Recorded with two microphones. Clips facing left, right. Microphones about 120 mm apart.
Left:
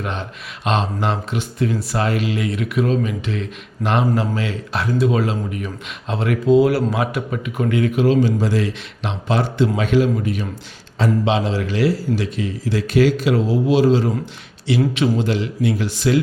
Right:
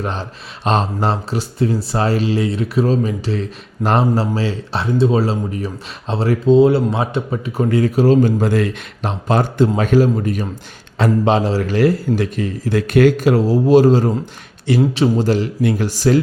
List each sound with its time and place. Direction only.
0.0 s a man's voice: 35° right (ahead or behind)
10.9 s a man's voice: 60° right (ahead or behind)
11.3 s a man's voice: 40° right (ahead or behind)
14.8 s a man's voice: 30° right (ahead or behind)